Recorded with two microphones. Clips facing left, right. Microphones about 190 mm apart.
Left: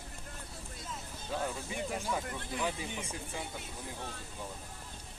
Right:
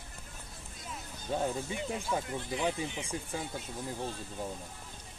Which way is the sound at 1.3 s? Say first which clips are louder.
Right 4 dB; 25° right (ahead or behind).